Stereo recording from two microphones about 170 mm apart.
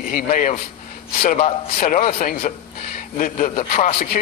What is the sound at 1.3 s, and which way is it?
Speech, 40° left (ahead or behind).